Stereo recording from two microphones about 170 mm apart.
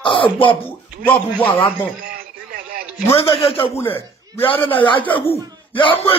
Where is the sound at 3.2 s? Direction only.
35° left (ahead or behind).